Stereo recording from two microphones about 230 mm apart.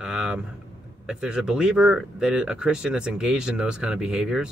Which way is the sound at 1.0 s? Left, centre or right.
Centre.